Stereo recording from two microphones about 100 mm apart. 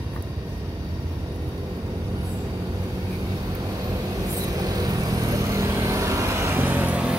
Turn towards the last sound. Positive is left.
turn(degrees=-15)  # may be behind; listen again after turning